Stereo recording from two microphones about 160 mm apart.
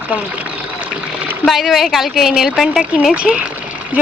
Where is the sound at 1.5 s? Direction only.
Centre (ahead or behind).